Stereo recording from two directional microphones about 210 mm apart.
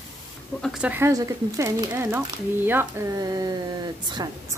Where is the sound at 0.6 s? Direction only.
Centre (ahead or behind).